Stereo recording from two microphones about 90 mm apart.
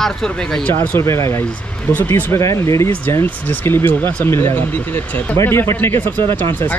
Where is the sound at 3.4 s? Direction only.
20° left (ahead or behind).